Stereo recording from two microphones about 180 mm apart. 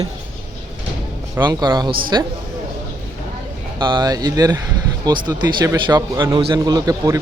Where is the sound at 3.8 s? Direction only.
25° right (ahead or behind).